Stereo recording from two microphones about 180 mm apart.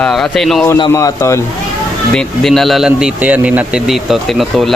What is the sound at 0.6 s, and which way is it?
Speech, 15° left (ahead or behind).